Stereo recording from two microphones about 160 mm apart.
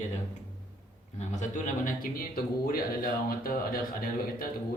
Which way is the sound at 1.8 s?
65° left (ahead or behind).